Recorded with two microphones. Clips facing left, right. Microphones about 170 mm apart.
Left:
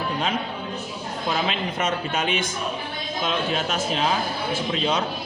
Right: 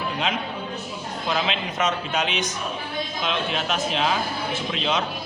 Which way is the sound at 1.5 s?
45° left (ahead or behind).